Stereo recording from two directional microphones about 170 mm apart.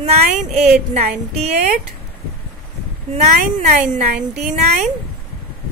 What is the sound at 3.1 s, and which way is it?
Speech, 45° right (ahead or behind).